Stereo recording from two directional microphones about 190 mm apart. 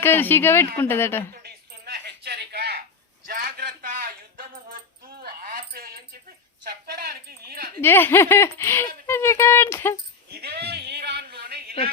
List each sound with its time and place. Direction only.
0.0 s speech: 10° left (ahead or behind)
1.3 s a sound: 55° right (ahead or behind)
5.0 s keys jangling: 50° right (ahead or behind)
6.7 s a sound: 55° right (ahead or behind)
7.8 s speech: 10° left (ahead or behind)
10.4 s music: 60° right (ahead or behind)